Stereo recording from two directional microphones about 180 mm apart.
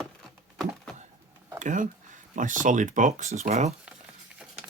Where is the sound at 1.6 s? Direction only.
45° right (ahead or behind).